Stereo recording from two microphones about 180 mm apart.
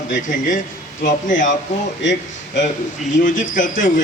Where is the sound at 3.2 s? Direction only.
45° left (ahead or behind).